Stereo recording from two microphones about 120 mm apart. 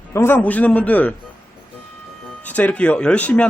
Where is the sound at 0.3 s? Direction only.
10° left (ahead or behind).